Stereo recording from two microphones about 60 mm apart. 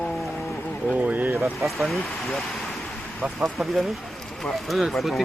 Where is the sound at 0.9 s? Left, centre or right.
Right.